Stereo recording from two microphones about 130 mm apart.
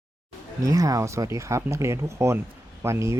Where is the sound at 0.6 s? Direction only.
25° right (ahead or behind).